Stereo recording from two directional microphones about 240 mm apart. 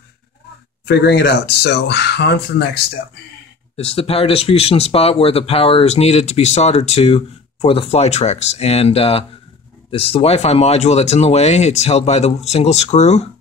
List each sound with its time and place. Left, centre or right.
0.8 s speech: left
3.7 s speech: left